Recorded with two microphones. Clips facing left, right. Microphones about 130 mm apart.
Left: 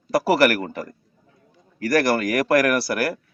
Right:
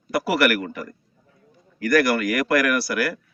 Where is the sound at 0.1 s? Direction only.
35° left (ahead or behind).